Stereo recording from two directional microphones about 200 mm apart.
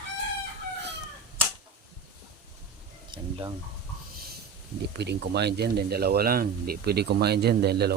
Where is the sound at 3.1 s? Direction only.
25° right (ahead or behind).